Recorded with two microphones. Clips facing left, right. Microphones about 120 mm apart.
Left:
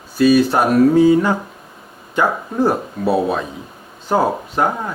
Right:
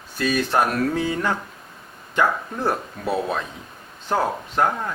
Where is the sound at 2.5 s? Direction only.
10° left (ahead or behind).